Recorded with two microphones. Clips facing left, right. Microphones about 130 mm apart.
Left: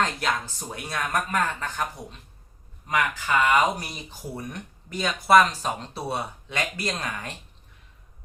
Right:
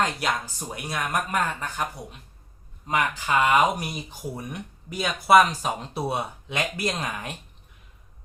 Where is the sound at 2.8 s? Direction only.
20° right (ahead or behind).